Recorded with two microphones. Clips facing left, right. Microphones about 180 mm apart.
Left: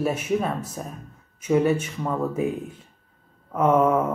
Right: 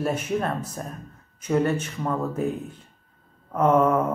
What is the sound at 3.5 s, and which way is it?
Speech, 5° left (ahead or behind).